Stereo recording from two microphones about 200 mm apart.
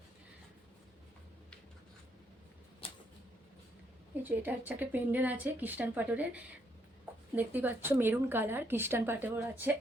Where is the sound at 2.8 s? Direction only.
25° left (ahead or behind).